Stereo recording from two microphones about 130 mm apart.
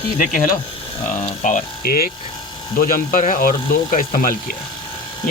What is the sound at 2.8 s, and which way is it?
Speech, 90° left.